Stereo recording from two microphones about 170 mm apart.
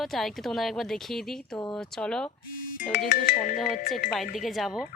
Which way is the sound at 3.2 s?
50° left (ahead or behind).